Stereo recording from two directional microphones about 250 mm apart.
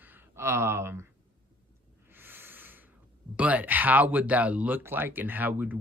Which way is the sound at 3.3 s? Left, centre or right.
Centre.